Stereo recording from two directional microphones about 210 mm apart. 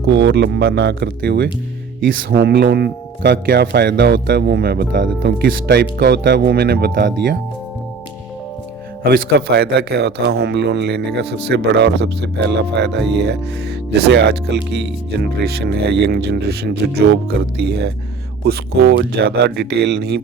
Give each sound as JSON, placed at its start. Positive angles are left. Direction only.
{"t": 0.0, "sound": "speech", "side_deg": -55}
{"t": 9.6, "sound": "speech", "side_deg": -50}